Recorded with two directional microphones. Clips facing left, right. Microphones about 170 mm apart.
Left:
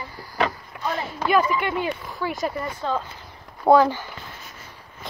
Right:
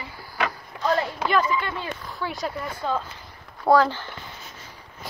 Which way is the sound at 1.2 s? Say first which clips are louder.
Left 2 dB; 10° left (ahead or behind).